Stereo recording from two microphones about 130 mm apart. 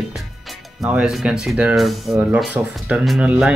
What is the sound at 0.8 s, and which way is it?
Speech, 5° right (ahead or behind).